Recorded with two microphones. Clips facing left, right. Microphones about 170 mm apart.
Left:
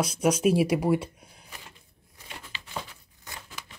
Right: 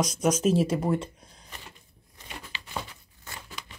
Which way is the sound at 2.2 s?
10° left (ahead or behind).